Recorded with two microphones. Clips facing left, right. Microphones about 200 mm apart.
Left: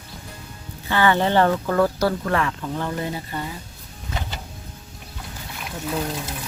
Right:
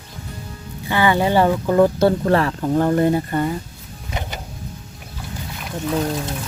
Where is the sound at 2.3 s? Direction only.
35° right (ahead or behind); by 3.5 s 55° right (ahead or behind).